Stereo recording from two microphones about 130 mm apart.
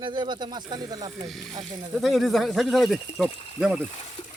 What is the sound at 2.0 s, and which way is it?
Speech, centre (ahead or behind).